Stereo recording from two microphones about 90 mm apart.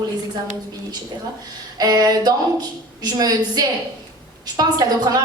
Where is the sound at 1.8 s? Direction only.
45° right (ahead or behind).